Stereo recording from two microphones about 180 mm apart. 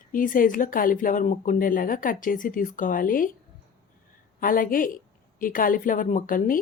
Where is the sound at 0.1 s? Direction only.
50° left (ahead or behind).